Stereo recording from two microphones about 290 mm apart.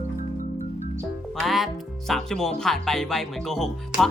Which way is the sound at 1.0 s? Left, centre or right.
Centre.